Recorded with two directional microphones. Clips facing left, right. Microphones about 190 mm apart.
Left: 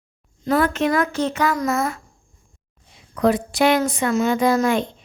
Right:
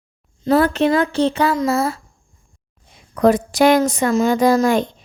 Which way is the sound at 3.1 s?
45° right (ahead or behind).